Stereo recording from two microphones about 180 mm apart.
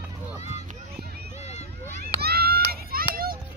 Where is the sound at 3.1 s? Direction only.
55° right (ahead or behind).